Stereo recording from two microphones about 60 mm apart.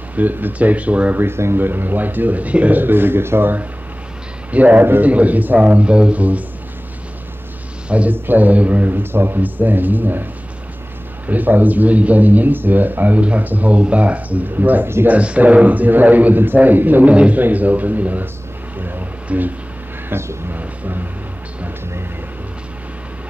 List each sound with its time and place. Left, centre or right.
0.1 s speech: right
1.2 s speech: right
7.9 s speech: right
11.2 s speech: right
15.0 s speech: right
18.8 s vehicle: right
20.1 s speech: right
20.5 s a sound: right